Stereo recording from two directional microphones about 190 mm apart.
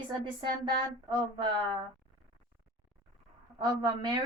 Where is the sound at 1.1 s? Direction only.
25° right (ahead or behind).